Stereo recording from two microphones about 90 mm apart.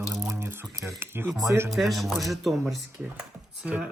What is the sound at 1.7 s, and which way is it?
Speech, centre (ahead or behind).